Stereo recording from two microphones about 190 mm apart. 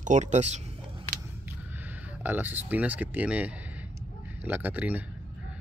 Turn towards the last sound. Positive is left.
turn(degrees=-10)  # may be behind; listen again after turning